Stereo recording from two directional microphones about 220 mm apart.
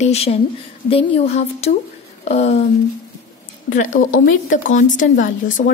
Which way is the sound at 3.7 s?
35° left (ahead or behind).